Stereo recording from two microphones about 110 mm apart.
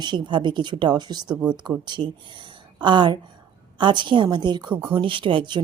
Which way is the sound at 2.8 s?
45° right (ahead or behind).